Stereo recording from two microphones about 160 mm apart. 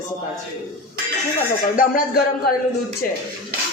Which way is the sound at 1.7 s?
65° left (ahead or behind).